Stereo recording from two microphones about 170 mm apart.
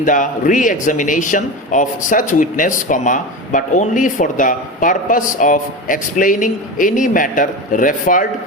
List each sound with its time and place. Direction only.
0.0 s a man's voice: 50° left (ahead or behind)